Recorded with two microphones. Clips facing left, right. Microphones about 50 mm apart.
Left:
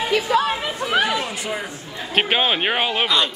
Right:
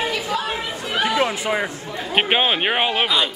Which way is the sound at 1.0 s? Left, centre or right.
Right.